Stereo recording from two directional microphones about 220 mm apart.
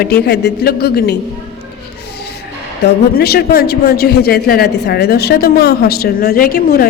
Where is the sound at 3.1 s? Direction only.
45° left (ahead or behind).